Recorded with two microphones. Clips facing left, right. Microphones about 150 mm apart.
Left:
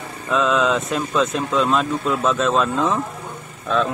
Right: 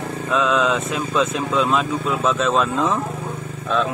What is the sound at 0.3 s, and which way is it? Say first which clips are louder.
Speech: left 1 dB; centre (ahead or behind).